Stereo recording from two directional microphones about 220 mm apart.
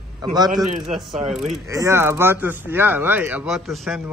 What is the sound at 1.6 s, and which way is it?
Speech, 15° right (ahead or behind).